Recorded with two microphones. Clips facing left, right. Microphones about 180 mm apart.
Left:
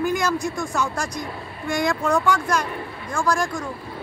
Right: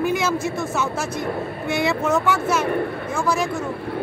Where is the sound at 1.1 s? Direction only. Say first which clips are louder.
Right 7 dB; 55° right (ahead or behind).